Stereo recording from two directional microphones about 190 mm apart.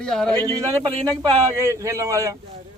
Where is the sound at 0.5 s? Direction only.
20° right (ahead or behind).